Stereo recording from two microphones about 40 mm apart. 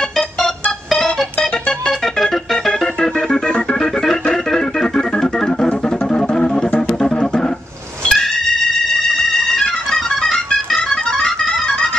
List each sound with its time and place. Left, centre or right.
0.8 s organ: centre
4.0 s organ: centre
6.0 s music: centre
8.0 s a sound: centre
9.8 s music: centre